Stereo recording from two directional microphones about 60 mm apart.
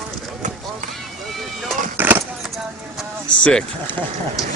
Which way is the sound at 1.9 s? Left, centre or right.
Right.